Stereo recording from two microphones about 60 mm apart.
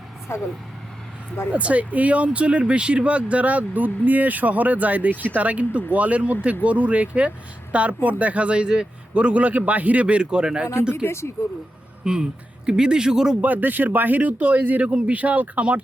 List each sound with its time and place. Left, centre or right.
0.3 s speech: left
1.5 s speech: right
11.0 s speech: left
12.0 s a man's voice: centre
13.4 s speech: right